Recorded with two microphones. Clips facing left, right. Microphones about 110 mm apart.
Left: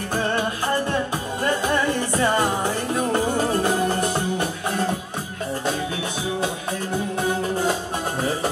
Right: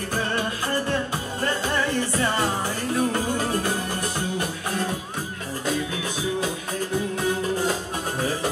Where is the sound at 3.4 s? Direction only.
35° left (ahead or behind).